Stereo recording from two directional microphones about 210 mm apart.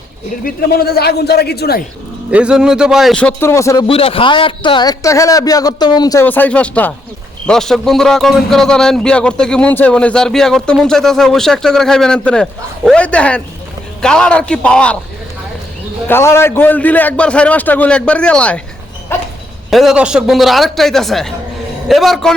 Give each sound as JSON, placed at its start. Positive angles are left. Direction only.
{"t": 0.4, "sound": "a man's voice", "side_deg": 45}
{"t": 2.3, "sound": "a man's voice", "side_deg": -5}
{"t": 3.8, "sound": "a man's voice", "side_deg": 25}
{"t": 16.0, "sound": "a man's voice", "side_deg": 10}
{"t": 19.1, "sound": "dog", "side_deg": 10}
{"t": 19.7, "sound": "a man's voice", "side_deg": 0}